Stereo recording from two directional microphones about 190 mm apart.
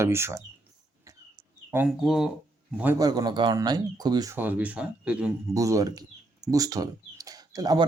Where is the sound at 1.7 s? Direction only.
10° right (ahead or behind).